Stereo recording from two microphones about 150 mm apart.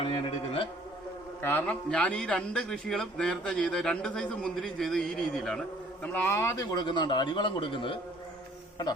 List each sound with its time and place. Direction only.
0.0 s speech: 40° left (ahead or behind)
1.4 s a man's voice: 15° left (ahead or behind); by 7.9 s 35° left (ahead or behind)